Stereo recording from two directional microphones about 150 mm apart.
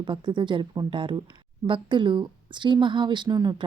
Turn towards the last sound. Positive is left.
turn(degrees=-30)  # may be behind; listen again after turning